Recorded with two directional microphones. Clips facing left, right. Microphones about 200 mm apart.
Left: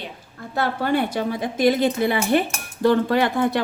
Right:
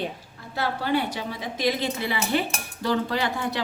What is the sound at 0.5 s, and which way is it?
Speech, 50° left (ahead or behind).